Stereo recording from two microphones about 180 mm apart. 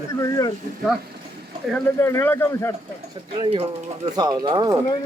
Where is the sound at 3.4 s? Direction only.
30° right (ahead or behind).